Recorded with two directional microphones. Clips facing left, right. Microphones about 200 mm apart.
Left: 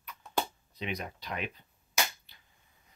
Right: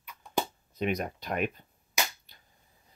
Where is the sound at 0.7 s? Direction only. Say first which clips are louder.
Right 7 dB; 50° right (ahead or behind).